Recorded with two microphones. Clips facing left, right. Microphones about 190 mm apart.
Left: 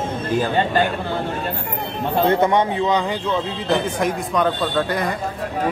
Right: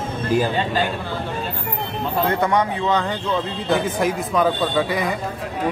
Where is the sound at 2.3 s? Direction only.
25° left (ahead or behind).